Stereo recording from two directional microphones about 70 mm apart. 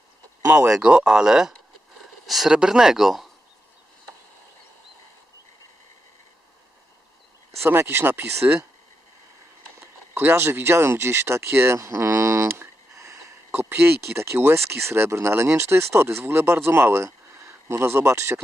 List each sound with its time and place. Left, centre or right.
0.4 s speech: right
0.7 s speech: centre
7.7 s speech: right
10.2 s speech: right
13.5 s speech: right